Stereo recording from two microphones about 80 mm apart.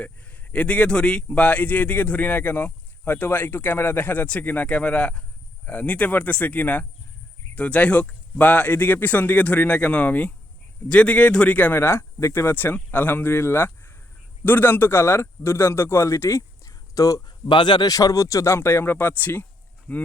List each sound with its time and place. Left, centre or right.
0.0 s a man's voice: centre; by 17.2 s left
17.2 s speech: left
17.9 s a man's voice: left; by 20.0 s centre